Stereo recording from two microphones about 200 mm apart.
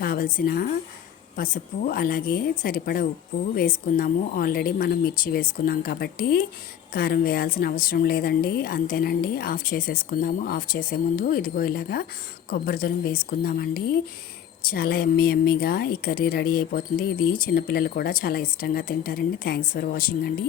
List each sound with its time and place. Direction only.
0.0 s a woman's voice: 45° left (ahead or behind)